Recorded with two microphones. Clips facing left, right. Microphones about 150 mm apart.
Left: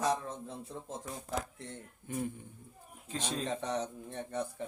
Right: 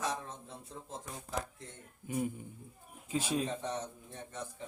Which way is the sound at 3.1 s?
10° right (ahead or behind).